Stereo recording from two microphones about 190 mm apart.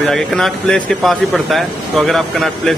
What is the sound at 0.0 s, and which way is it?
Speech, centre (ahead or behind).